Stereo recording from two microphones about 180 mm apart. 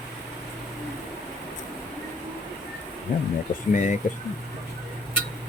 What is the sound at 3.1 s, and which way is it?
Speech, 50° left (ahead or behind).